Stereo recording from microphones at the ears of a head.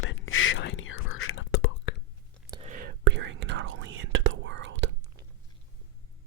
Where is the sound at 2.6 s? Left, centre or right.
Right.